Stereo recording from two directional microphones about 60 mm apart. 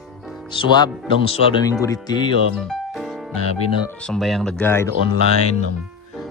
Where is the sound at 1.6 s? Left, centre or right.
Left.